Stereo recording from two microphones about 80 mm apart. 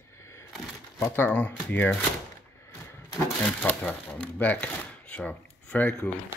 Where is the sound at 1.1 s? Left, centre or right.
Left.